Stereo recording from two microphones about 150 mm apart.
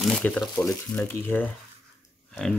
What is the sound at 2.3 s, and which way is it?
Pig, 5° left (ahead or behind).